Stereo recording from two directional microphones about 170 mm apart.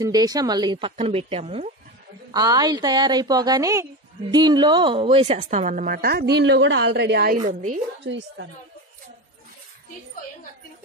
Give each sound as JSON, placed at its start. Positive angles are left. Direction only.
{"t": 0.0, "sound": "a woman's voice", "side_deg": -20}
{"t": 2.3, "sound": "a woman's voice", "side_deg": -25}
{"t": 7.4, "sound": "a woman's voice", "side_deg": -50}
{"t": 8.0, "sound": "a woman's voice", "side_deg": -90}